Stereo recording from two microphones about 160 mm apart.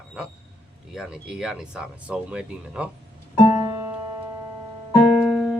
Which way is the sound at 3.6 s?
20° right (ahead or behind).